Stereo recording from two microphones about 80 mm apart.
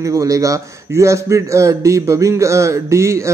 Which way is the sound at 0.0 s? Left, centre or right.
Right.